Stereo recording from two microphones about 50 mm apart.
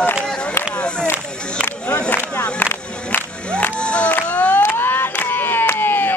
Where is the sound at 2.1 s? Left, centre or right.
Left.